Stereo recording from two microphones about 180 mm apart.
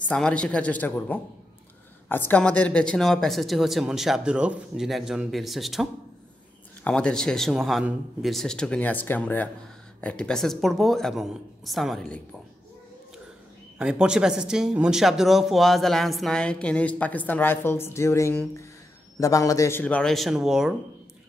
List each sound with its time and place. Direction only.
0.0 s a man's voice: 5° left (ahead or behind)
13.7 s a man's voice: 5° right (ahead or behind); by 19.8 s 15° left (ahead or behind)
19.8 s speech: 5° left (ahead or behind)